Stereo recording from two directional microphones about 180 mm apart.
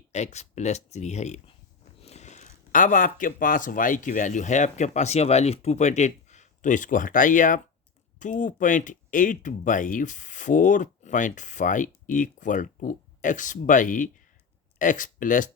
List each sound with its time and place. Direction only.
0.1 s speech: 40° left (ahead or behind)